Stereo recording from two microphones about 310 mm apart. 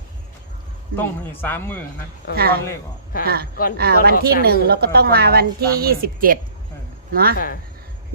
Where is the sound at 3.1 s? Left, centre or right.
Left.